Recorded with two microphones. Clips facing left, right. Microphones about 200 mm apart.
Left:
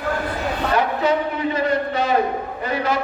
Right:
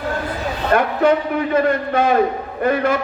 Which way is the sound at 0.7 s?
55° right (ahead or behind).